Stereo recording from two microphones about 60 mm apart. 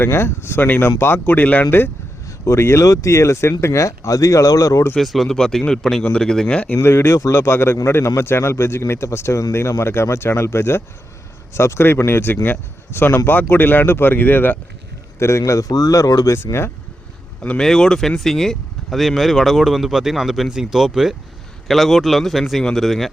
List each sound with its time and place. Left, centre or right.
0.0 s speech: left
1.2 s speech: left
2.2 s a sound: left
2.6 s speech: left
2.8 s speech: left
4.9 s speech: centre
6.8 s speech: left
15.2 s speech: left
16.3 s speech: left
17.6 s speech: centre